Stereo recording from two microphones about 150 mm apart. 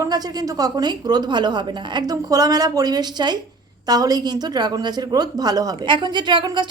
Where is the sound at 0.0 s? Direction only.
25° right (ahead or behind).